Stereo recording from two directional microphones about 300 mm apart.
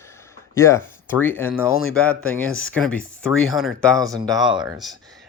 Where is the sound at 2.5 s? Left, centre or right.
Left.